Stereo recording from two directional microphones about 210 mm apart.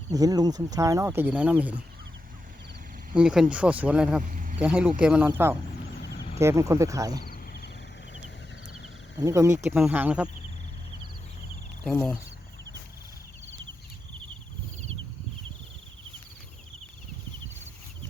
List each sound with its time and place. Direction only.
0.1 s speech: 15° right (ahead or behind)
3.2 s speech: 5° right (ahead or behind)
4.2 s a sound: 40° right (ahead or behind)
4.6 s speech: 5° right (ahead or behind)
7.3 s frog: 50° left (ahead or behind)
9.2 s speech: 15° right (ahead or behind)
11.8 s speech: 5° left (ahead or behind)